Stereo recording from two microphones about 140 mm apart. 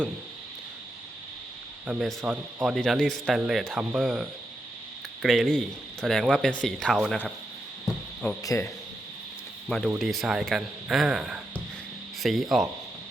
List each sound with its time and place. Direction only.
1.9 s speech: 5° right (ahead or behind)
8.4 s speech: 20° left (ahead or behind)
9.6 s speech: 5° left (ahead or behind)